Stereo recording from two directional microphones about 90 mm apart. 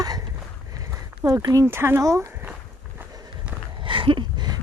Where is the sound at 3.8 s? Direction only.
70° right (ahead or behind).